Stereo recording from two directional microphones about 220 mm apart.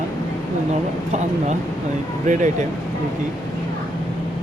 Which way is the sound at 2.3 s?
35° right (ahead or behind).